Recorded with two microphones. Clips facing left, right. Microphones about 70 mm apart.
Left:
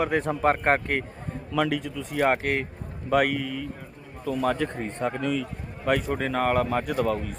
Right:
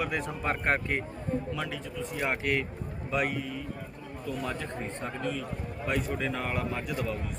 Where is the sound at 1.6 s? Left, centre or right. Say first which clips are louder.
Left 9 dB; left.